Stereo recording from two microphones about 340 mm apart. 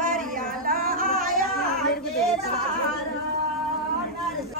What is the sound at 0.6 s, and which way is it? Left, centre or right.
Singing, right.